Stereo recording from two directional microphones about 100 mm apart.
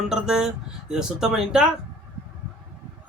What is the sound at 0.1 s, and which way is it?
Speech, 5° right (ahead or behind).